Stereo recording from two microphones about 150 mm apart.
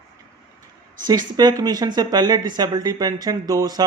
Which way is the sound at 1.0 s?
30° right (ahead or behind).